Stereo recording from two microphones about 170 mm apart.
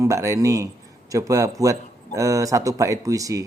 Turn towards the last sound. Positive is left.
turn(degrees=-20)  # may be behind; listen again after turning